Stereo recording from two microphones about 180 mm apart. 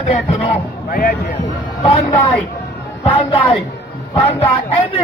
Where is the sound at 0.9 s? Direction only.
55° left (ahead or behind).